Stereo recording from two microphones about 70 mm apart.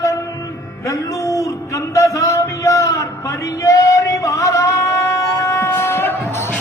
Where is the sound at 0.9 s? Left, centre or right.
Left.